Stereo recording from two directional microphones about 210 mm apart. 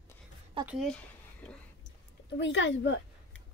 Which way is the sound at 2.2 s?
60° left (ahead or behind).